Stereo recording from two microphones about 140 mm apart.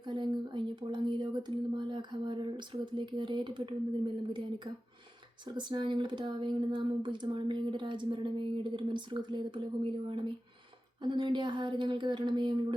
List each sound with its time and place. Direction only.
0.0 s speech: 35° right (ahead or behind)